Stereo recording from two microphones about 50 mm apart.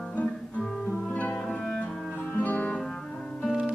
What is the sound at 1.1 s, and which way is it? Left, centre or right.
Music, left.